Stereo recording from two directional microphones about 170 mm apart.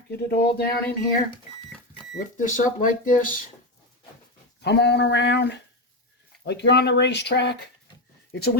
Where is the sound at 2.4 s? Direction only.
50° left (ahead or behind).